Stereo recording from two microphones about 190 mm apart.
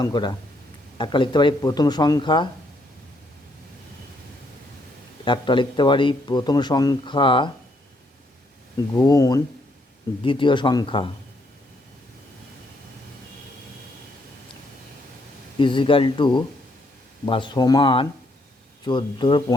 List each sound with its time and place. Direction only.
0.0 s speech: 20° left (ahead or behind)
5.2 s speech: 25° left (ahead or behind)
9.0 s speech: 20° left (ahead or behind)
15.5 s speech: 25° left (ahead or behind)